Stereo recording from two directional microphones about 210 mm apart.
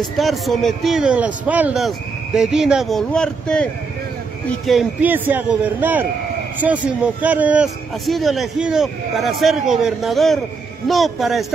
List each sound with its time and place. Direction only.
0.2 s a man's voice: centre (ahead or behind)
4.6 s a man's voice: 5° right (ahead or behind)